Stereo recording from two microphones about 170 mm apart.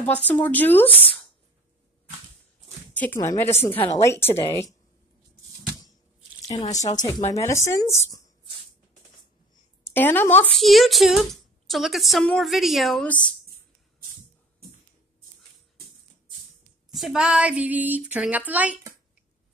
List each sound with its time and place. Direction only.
0.0 s a woman's voice: 10° left (ahead or behind)
2.9 s a woman's voice: 10° left (ahead or behind)
6.6 s speech: 40° left (ahead or behind)
7.0 s a woman's voice: 25° left (ahead or behind)
9.9 s speech: 10° left (ahead or behind)
16.9 s speech: centre (ahead or behind)